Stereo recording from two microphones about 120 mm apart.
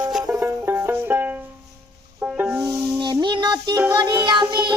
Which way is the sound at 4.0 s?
35° right (ahead or behind).